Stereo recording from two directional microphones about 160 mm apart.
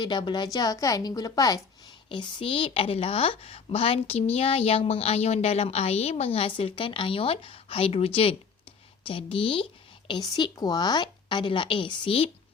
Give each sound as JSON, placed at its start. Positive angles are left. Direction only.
{"t": 0.0, "sound": "a woman's voice", "side_deg": 30}
{"t": 2.0, "sound": "a woman's voice", "side_deg": 35}